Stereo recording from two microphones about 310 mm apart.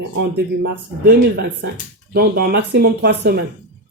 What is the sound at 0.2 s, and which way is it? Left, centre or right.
Speech, right.